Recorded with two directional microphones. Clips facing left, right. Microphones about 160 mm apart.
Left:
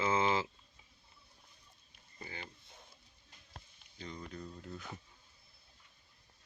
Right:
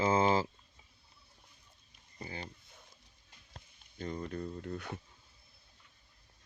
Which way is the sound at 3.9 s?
50° right (ahead or behind).